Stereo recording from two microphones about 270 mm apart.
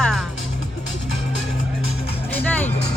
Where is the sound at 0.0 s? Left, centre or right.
Centre.